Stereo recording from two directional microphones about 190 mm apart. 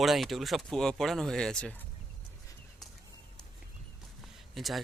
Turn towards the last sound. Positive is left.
turn(degrees=0)  # may be behind; listen again after turning